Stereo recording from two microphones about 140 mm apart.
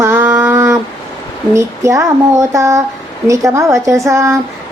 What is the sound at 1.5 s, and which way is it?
Speech, 20° right (ahead or behind).